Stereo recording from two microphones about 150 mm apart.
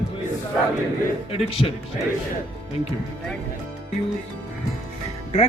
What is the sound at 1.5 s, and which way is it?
Speech, 40° left (ahead or behind).